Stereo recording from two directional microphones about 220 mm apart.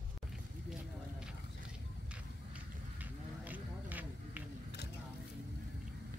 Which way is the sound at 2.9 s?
5° right (ahead or behind).